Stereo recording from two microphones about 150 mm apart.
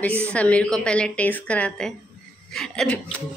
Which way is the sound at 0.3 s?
10° left (ahead or behind).